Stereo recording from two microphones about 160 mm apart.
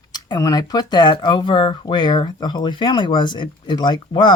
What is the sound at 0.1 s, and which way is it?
Speech, 25° left (ahead or behind).